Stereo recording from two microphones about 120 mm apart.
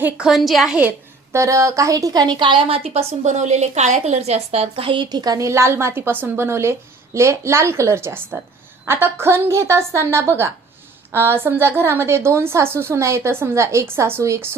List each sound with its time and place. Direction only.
0.0 s a woman's voice: 5° right (ahead or behind)
1.3 s a woman's voice: 25° right (ahead or behind)